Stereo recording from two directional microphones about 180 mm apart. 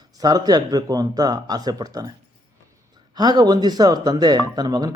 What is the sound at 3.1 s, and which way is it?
Speech, 20° right (ahead or behind).